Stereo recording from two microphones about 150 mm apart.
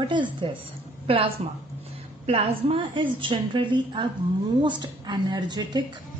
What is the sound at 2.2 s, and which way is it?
A woman's voice, 40° right (ahead or behind).